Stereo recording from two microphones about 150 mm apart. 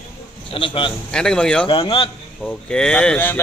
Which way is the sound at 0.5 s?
35° left (ahead or behind).